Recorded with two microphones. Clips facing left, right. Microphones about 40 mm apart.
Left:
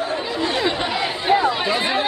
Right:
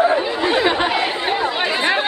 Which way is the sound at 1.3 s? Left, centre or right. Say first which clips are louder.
Left 3 dB; centre.